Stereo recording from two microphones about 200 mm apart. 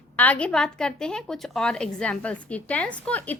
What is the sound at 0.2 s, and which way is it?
A woman's voice, 5° left (ahead or behind).